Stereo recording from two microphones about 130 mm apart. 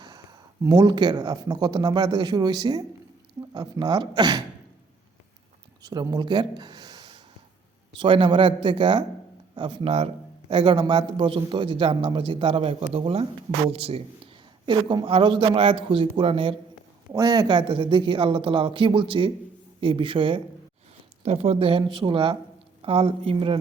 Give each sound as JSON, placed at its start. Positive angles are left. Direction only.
{"t": 0.6, "sound": "speech", "side_deg": -30}
{"t": 5.8, "sound": "a man's voice", "side_deg": -30}
{"t": 14.7, "sound": "a man's voice", "side_deg": -35}
{"t": 17.1, "sound": "speech", "side_deg": -30}
{"t": 21.2, "sound": "a man's voice", "side_deg": -60}